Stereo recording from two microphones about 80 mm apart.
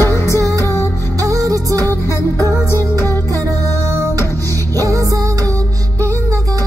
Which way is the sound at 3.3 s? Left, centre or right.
Right.